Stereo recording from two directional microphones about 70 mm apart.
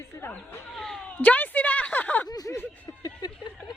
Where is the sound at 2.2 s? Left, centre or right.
Left.